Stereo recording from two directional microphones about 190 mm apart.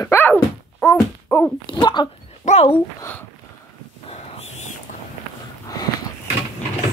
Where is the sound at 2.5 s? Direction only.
35° left (ahead or behind).